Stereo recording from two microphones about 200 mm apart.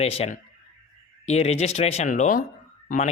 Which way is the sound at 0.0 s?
30° left (ahead or behind).